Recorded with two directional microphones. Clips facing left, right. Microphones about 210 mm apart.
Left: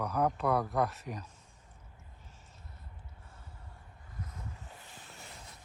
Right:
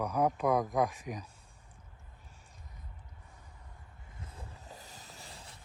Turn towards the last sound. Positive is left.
turn(degrees=-35)  # may be behind; listen again after turning